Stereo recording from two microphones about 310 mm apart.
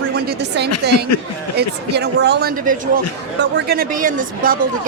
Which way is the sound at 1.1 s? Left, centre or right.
Left.